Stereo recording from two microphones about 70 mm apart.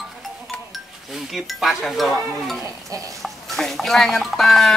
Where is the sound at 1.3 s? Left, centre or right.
Centre.